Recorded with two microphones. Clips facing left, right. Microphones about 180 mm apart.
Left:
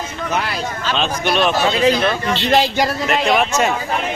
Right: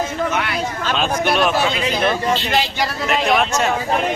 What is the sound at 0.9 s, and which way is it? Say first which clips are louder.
Speech: even; 5° right (ahead or behind).